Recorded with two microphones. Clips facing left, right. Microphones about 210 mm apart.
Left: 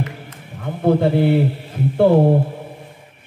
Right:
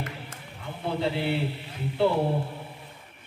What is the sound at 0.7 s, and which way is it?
A man's voice, 50° left (ahead or behind).